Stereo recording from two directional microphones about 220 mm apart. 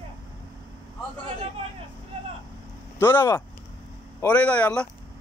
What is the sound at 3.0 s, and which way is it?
Speech, 10° left (ahead or behind).